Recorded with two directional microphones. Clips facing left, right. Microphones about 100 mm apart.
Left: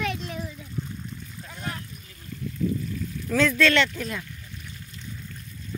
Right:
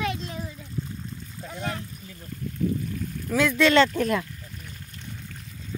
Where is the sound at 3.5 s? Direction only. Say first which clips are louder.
Right 6 dB; 25° right (ahead or behind).